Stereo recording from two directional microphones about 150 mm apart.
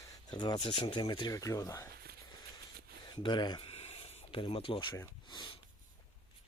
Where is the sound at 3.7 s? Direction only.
45° left (ahead or behind).